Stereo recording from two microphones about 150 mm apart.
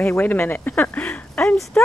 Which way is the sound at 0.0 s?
10° left (ahead or behind).